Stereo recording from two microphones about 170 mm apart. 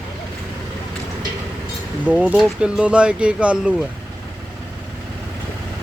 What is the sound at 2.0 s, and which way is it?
Speech, 5° right (ahead or behind).